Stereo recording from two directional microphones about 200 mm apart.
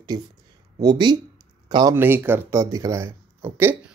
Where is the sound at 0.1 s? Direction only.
20° right (ahead or behind).